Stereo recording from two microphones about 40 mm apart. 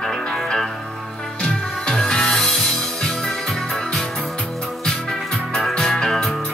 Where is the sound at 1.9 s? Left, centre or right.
Centre.